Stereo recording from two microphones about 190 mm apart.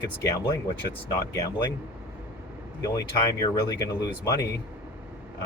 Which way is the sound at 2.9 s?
20° left (ahead or behind).